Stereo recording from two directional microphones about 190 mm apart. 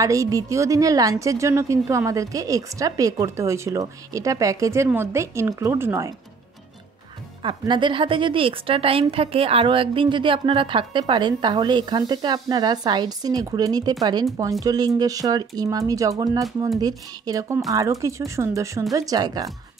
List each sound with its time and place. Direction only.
0.0 s a woman's voice: 15° right (ahead or behind)
7.4 s a woman's voice: 25° right (ahead or behind)